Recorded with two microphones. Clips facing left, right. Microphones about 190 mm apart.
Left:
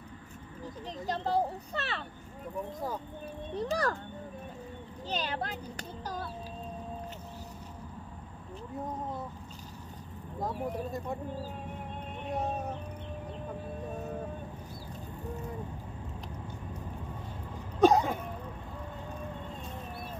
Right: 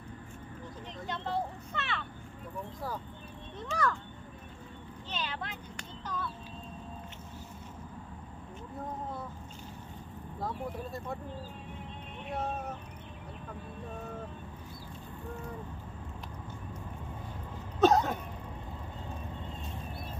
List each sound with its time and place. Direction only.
1.0 s vehicle: 35° left (ahead or behind)
3.5 s a child's voice: 35° left (ahead or behind)
5.1 s a child's voice: 40° left (ahead or behind)
17.7 s a sound: 10° left (ahead or behind)